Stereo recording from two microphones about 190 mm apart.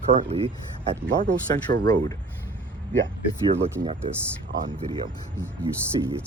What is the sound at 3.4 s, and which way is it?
Speech, 30° right (ahead or behind).